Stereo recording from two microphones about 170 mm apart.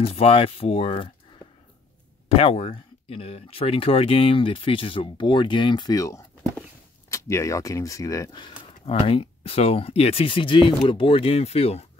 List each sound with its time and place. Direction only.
0.0 s speech: 35° left (ahead or behind)
2.2 s speech: 35° left (ahead or behind)